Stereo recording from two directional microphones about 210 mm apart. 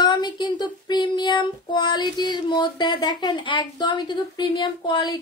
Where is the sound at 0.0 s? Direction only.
20° left (ahead or behind).